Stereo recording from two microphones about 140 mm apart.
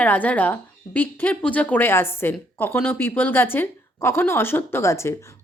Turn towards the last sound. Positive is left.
turn(degrees=20)  # may be behind; listen again after turning